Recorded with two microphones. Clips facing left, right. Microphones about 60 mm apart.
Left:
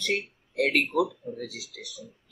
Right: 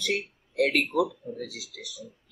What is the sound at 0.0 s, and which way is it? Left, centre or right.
Speech, centre.